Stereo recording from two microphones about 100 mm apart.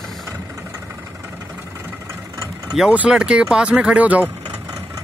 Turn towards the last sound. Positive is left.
turn(degrees=-15)  # may be behind; listen again after turning